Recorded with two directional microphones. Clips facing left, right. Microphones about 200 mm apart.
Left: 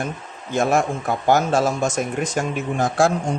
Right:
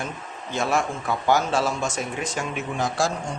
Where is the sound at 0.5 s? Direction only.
45° left (ahead or behind).